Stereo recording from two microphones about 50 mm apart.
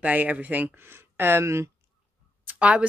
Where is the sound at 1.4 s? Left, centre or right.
Right.